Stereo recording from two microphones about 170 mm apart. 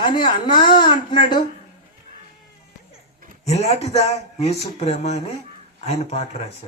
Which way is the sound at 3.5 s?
40° left (ahead or behind).